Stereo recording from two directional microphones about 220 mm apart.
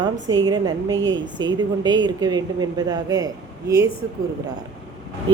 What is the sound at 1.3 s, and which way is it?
Speech, 20° right (ahead or behind).